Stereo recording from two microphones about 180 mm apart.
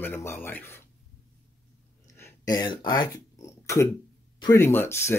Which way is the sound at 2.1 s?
15° left (ahead or behind).